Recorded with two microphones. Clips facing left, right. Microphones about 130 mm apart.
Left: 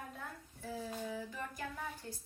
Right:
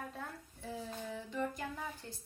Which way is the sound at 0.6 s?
5° left (ahead or behind).